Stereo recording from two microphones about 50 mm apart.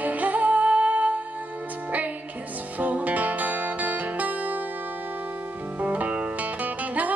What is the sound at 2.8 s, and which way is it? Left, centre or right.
Music, right.